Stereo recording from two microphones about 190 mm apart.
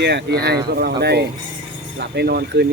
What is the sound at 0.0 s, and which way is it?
Speech, 60° right (ahead or behind).